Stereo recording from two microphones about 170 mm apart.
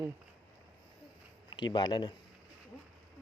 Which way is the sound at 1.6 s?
25° left (ahead or behind).